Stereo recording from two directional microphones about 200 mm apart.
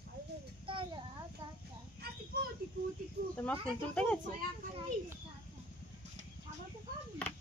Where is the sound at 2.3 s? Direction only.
50° right (ahead or behind).